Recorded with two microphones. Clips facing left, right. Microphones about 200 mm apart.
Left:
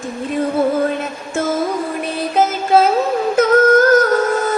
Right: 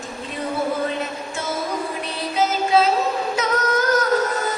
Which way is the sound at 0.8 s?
50° left (ahead or behind).